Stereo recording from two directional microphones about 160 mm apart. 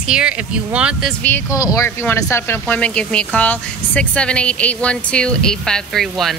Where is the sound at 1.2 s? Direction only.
15° left (ahead or behind).